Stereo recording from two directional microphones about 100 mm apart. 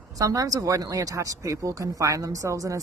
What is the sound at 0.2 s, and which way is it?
Speech, 35° right (ahead or behind).